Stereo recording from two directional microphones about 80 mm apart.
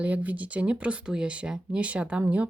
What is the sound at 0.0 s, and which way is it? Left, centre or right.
Speech, centre.